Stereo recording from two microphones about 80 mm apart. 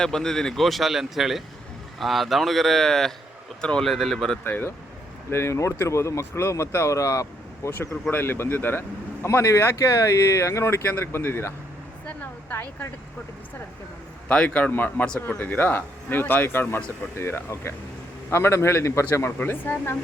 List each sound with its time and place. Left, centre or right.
0.0 s speech: centre
4.4 s speech: left
8.1 s speech: left
9.2 s speech: left
12.0 s a sound: left
14.3 s speech: centre